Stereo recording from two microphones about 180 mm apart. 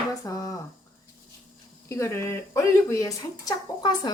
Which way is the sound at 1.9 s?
15° left (ahead or behind).